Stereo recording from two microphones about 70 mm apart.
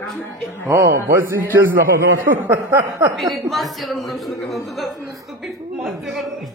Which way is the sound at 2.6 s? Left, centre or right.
Right.